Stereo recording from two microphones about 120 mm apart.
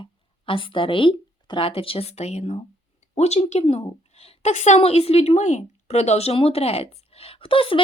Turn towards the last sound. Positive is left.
turn(degrees=50)  # may be behind; listen again after turning